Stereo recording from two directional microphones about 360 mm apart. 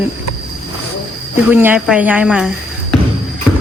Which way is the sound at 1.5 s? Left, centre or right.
Centre.